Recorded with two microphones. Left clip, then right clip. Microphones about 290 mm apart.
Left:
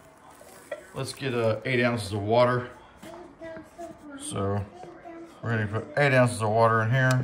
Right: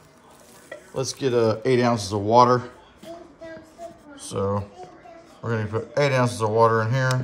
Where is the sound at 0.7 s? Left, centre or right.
Centre.